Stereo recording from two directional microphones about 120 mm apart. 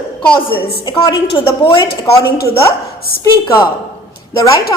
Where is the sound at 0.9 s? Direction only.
35° left (ahead or behind).